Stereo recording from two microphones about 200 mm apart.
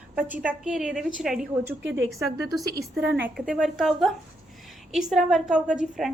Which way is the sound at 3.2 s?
5° right (ahead or behind).